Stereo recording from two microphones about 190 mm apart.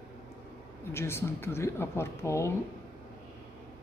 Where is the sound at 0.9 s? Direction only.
15° left (ahead or behind).